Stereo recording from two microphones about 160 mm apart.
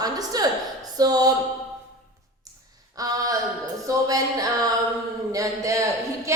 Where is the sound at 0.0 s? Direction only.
25° right (ahead or behind).